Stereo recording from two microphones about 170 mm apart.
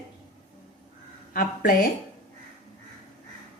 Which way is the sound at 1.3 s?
55° left (ahead or behind).